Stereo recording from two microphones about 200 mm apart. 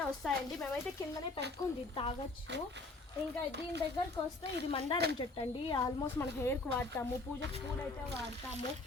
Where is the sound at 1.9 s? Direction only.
25° left (ahead or behind).